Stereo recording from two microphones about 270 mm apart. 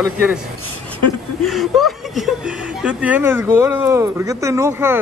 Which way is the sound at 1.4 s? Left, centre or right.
Centre.